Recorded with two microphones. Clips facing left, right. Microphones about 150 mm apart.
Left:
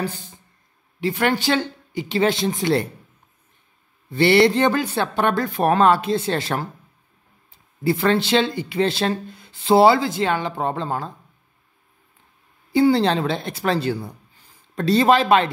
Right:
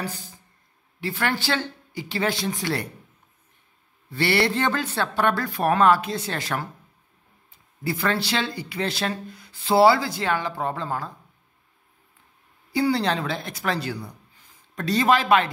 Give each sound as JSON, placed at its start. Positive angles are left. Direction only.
{"t": 0.0, "sound": "speech", "side_deg": 25}
{"t": 4.1, "sound": "speech", "side_deg": 20}
{"t": 12.7, "sound": "speech", "side_deg": 25}